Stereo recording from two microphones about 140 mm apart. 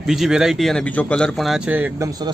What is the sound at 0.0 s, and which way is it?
Speech, 5° right (ahead or behind).